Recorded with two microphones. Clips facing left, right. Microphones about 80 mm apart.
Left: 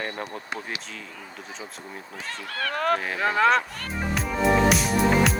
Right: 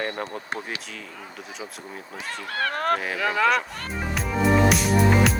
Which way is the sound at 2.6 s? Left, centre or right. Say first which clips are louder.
Even; right.